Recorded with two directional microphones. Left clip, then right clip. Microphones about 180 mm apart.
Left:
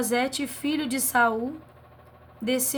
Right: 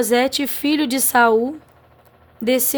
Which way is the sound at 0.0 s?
50° right (ahead or behind).